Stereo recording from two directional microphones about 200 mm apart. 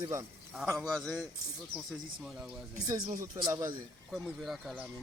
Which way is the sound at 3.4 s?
20° right (ahead or behind).